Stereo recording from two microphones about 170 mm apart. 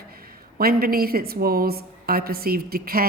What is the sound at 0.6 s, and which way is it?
A woman's voice, 60° right (ahead or behind).